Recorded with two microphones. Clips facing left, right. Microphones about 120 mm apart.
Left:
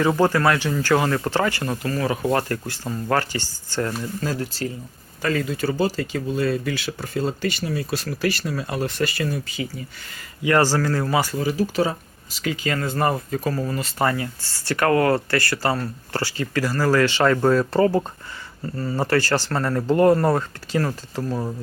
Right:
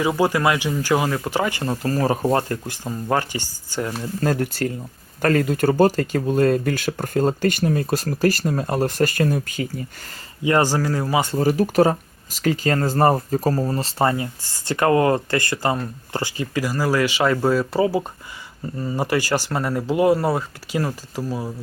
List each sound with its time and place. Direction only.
0.0 s speech: 10° right (ahead or behind)
1.6 s speech: 30° right (ahead or behind)
2.5 s speech: 15° right (ahead or behind)
4.2 s speech: 55° right (ahead or behind)
10.4 s speech: 20° right (ahead or behind)
11.3 s speech: 50° right (ahead or behind); by 21.5 s 5° right (ahead or behind)